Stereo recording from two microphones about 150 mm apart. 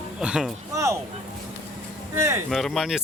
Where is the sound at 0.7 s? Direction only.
20° right (ahead or behind).